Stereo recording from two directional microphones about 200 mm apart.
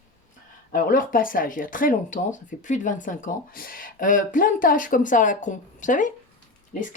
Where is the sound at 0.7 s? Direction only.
45° left (ahead or behind).